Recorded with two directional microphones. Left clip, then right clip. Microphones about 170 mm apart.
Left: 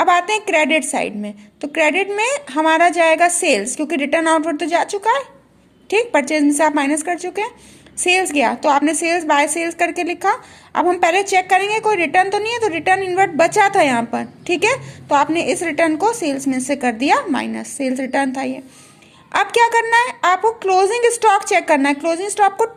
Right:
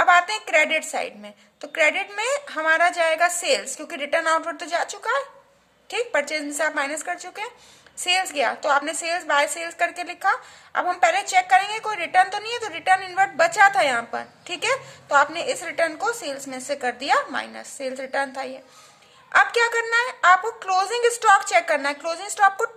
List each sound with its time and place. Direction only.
0.0 s a woman's voice: 15° left (ahead or behind)